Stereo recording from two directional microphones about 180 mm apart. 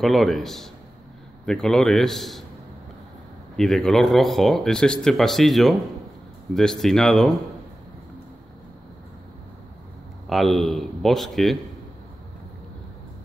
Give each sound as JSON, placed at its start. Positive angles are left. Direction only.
{"t": 0.0, "sound": "speech", "side_deg": 0}
{"t": 3.5, "sound": "speech", "side_deg": 0}
{"t": 10.2, "sound": "speech", "side_deg": 0}